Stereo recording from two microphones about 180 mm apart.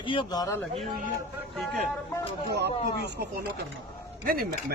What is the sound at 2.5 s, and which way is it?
Speech, 70° right (ahead or behind).